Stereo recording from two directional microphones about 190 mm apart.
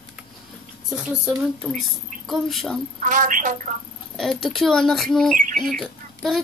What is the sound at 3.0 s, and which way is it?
Speech, 40° right (ahead or behind).